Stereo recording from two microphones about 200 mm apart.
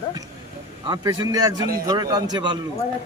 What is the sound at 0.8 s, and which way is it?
A man's voice, 20° right (ahead or behind).